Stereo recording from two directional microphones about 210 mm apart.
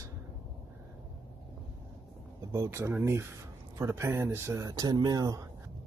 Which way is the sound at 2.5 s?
15° right (ahead or behind).